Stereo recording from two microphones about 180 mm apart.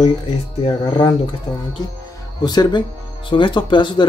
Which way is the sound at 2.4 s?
25° left (ahead or behind).